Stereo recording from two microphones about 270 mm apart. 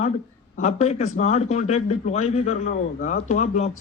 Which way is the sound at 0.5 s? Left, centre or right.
Left.